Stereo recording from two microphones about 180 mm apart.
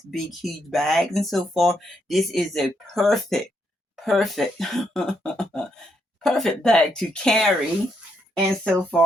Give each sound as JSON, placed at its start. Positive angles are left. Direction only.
{"t": 0.1, "sound": "speech", "side_deg": 0}
{"t": 8.6, "sound": "speech", "side_deg": 5}